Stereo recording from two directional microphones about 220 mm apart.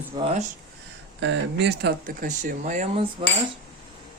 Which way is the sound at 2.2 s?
35° right (ahead or behind).